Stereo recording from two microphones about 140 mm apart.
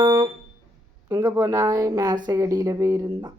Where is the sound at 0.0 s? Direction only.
30° right (ahead or behind).